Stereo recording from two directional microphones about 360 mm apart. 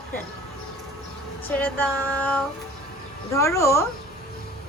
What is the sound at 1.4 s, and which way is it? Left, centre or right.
A woman's voice, centre.